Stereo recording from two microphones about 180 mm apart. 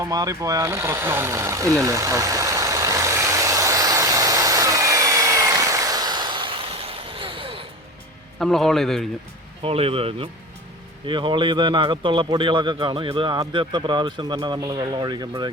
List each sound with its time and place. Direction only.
0.0 s a sound: 20° right (ahead or behind)
8.4 s a man's voice: centre (ahead or behind)
9.6 s a man's voice: 30° right (ahead or behind)